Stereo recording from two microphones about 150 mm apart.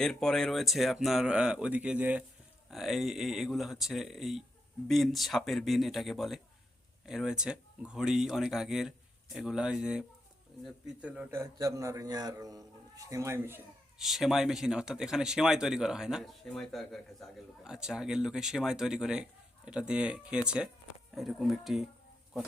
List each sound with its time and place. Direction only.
0.0 s a man's voice: 5° left (ahead or behind); by 13.6 s 15° right (ahead or behind)
14.0 s speech: centre (ahead or behind)